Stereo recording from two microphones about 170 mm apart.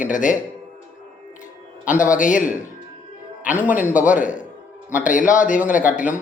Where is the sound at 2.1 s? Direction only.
50° left (ahead or behind).